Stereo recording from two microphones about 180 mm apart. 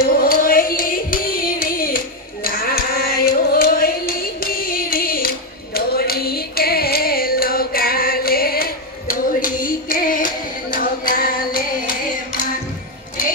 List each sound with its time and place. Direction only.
0.2 s singing: 55° left (ahead or behind)
5.8 s music: 60° left (ahead or behind)